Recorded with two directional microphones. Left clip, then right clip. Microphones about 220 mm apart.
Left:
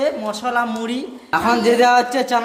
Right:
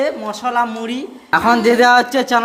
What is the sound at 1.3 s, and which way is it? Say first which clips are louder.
A woman's voice: right 3 dB; 20° right (ahead or behind).